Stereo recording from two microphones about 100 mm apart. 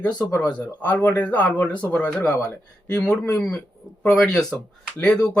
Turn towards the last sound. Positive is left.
turn(degrees=10)  # may be behind; listen again after turning